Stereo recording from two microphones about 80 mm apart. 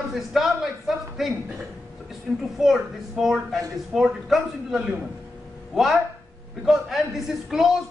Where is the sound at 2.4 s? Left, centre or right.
Centre.